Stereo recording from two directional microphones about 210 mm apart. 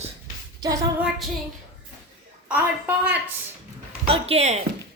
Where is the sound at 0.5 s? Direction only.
15° right (ahead or behind).